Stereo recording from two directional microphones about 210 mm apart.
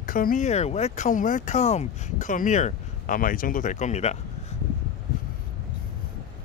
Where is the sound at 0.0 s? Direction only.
40° left (ahead or behind).